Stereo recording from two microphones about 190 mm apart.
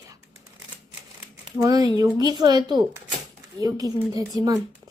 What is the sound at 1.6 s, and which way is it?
A woman's voice, 20° right (ahead or behind).